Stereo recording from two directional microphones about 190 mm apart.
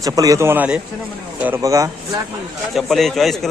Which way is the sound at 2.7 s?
Centre (ahead or behind).